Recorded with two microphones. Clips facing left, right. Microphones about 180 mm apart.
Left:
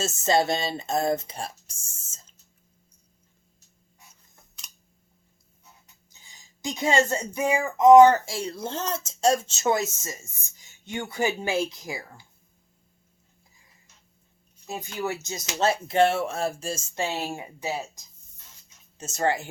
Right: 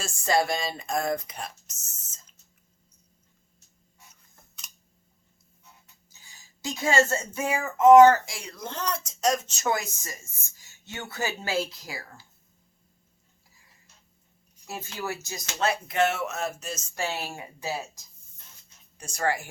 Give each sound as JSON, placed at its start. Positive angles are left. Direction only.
{"t": 0.2, "sound": "speech", "side_deg": 25}
{"t": 6.1, "sound": "speech", "side_deg": 15}
{"t": 8.3, "sound": "speech", "side_deg": 30}
{"t": 14.7, "sound": "speech", "side_deg": 20}